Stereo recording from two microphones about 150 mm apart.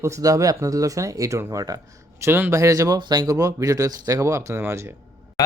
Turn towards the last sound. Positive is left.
turn(degrees=25)  # may be behind; listen again after turning